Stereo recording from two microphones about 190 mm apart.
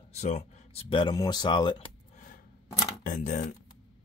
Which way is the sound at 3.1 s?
40° left (ahead or behind).